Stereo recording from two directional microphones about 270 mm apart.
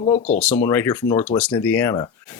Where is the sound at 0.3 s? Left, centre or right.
Centre.